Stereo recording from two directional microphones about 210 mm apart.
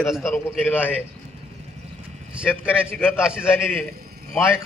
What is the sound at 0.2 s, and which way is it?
Speech, 10° left (ahead or behind).